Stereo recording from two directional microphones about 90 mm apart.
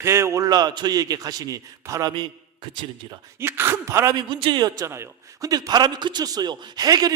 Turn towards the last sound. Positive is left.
turn(degrees=-45)  # may be behind; listen again after turning